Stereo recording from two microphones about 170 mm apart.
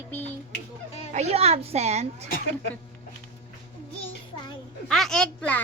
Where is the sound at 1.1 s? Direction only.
40° right (ahead or behind).